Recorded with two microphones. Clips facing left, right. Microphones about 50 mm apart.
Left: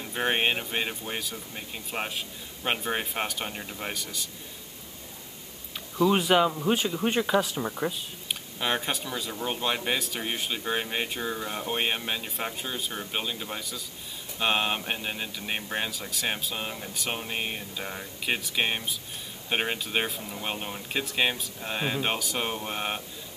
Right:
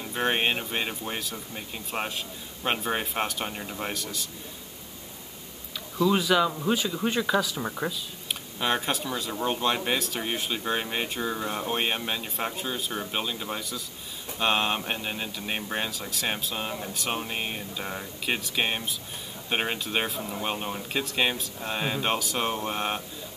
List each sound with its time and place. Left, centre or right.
0.0 s speech: centre
6.0 s speech: left
7.2 s speech: left
7.6 s speech: centre